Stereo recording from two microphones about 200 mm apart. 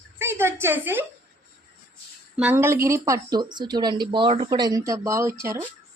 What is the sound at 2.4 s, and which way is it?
Speech, 10° right (ahead or behind).